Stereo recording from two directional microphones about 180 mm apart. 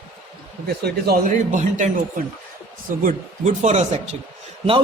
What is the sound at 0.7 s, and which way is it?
Speech, 60° right (ahead or behind).